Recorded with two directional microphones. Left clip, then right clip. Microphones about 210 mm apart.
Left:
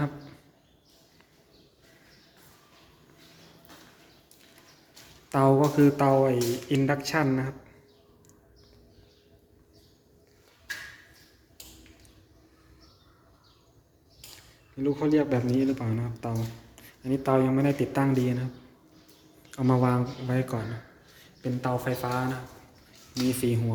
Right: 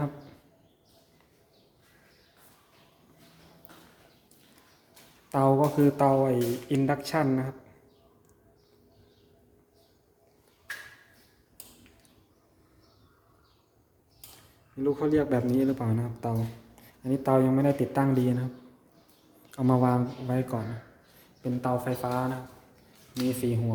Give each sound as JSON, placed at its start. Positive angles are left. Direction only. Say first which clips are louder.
{"t": 5.3, "sound": "a man's voice", "louder": "left 1 dB", "side_deg": -5}
{"t": 14.8, "sound": "a man's voice", "louder": "left 1 dB", "side_deg": -15}